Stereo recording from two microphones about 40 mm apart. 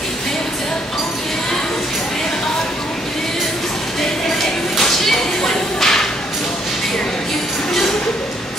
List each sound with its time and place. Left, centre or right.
4.7 s whip: centre